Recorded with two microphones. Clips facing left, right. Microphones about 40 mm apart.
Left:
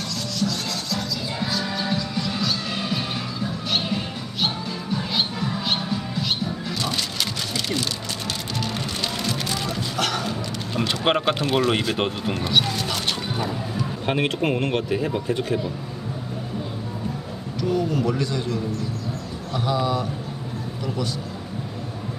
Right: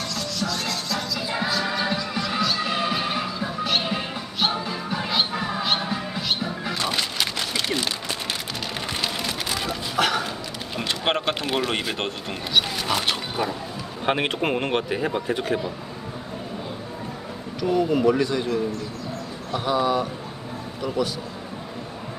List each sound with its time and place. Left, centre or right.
0.1 s music: centre
5.6 s music: centre
6.7 s a sound: centre
8.6 s music: centre
10.8 s speech: centre
12.6 s speech: centre
17.6 s speech: centre